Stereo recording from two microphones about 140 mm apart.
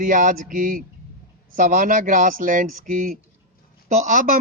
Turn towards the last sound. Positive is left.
turn(degrees=-70)  # may be behind; listen again after turning